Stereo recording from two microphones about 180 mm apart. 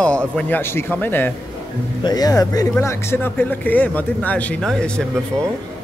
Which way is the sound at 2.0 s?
20° left (ahead or behind).